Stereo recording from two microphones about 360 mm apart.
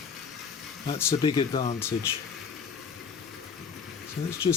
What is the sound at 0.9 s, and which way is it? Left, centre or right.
Speech, centre.